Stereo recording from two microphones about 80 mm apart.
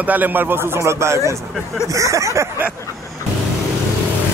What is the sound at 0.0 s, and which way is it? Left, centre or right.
A man's voice, right.